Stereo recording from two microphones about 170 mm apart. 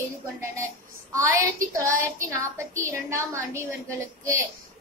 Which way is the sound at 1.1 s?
20° right (ahead or behind).